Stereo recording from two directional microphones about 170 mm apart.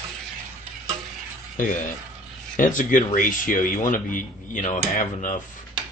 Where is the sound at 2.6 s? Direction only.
50° left (ahead or behind).